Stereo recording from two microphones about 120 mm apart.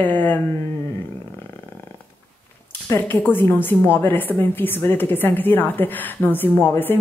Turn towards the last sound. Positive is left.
turn(degrees=15)  # may be behind; listen again after turning